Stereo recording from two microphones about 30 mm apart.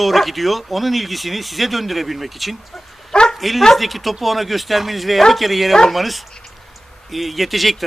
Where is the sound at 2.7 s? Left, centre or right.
Left.